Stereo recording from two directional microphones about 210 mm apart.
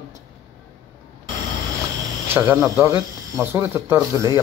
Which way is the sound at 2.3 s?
10° right (ahead or behind).